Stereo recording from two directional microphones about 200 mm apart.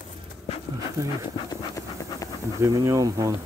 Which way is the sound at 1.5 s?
15° left (ahead or behind).